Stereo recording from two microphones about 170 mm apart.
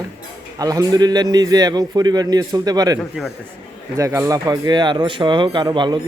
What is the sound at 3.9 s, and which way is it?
Speech, 15° right (ahead or behind).